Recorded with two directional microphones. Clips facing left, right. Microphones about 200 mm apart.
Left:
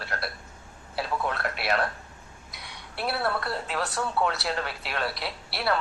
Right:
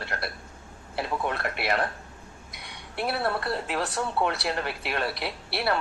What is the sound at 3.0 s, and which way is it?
A woman's voice, 20° right (ahead or behind).